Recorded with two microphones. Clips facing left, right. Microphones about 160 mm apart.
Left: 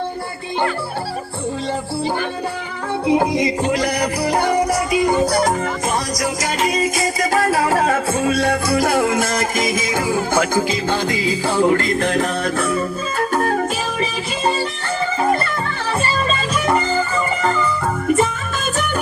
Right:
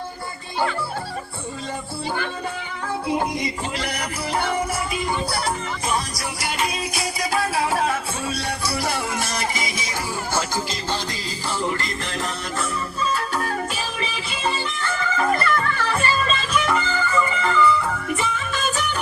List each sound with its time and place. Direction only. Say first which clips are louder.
3.1 s music: left 8 dB; 90° left
3.8 s music: left 9 dB; 40° left (ahead or behind)
6.7 s music: left 8 dB; 45° left (ahead or behind)
15.1 s music: left 1 dB; 30° left (ahead or behind)
16.6 s music: left 5 dB; 40° left (ahead or behind)